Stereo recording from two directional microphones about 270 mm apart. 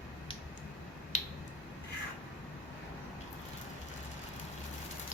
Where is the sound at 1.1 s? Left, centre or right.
Left.